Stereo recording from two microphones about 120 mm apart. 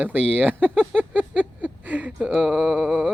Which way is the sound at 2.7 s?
10° right (ahead or behind).